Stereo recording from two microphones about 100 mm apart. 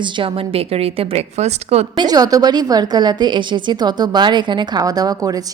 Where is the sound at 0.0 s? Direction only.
60° right (ahead or behind); by 1.9 s 90° right.